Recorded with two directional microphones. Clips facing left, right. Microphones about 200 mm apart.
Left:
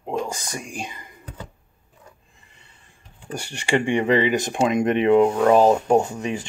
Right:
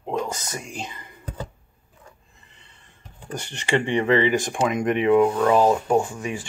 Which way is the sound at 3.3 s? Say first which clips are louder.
Left 1 dB; 10° left (ahead or behind).